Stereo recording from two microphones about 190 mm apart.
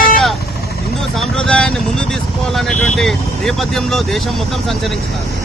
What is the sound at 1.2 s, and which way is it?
Speech, 5° left (ahead or behind).